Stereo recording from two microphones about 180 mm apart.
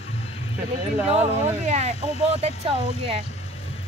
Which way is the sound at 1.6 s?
40° right (ahead or behind).